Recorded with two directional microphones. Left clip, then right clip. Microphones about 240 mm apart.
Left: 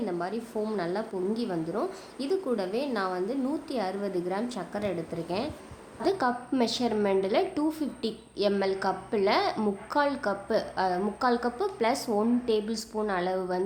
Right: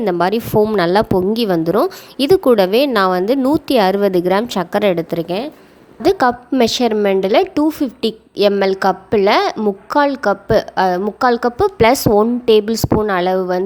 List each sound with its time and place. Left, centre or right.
0.0 s a woman's voice: right